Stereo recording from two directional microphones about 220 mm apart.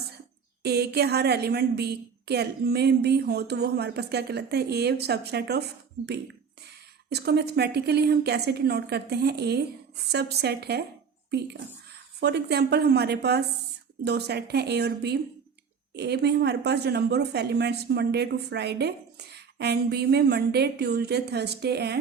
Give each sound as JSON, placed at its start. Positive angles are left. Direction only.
{"t": 0.6, "sound": "a woman's voice", "side_deg": -45}
{"t": 7.1, "sound": "a woman's voice", "side_deg": -50}
{"t": 12.2, "sound": "a woman's voice", "side_deg": -50}